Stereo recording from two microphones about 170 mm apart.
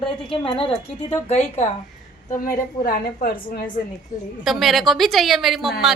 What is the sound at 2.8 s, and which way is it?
Speech, 55° left (ahead or behind).